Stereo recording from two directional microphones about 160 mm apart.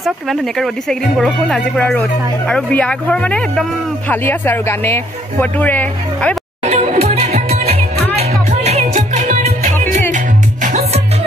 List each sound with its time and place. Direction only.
0.0 s speech: centre (ahead or behind)
6.7 s music: 40° right (ahead or behind)